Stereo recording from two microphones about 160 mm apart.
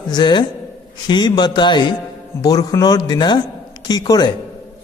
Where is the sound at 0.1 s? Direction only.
30° left (ahead or behind).